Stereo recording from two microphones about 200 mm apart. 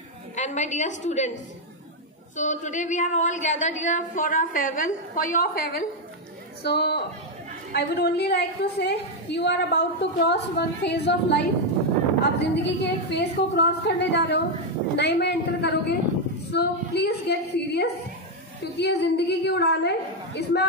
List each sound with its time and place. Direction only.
0.4 s a woman's voice: 35° left (ahead or behind); by 20.6 s 55° left (ahead or behind)